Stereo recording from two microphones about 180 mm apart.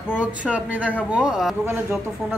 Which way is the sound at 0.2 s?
10° right (ahead or behind).